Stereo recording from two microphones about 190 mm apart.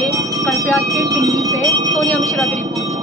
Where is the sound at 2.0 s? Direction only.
Centre (ahead or behind).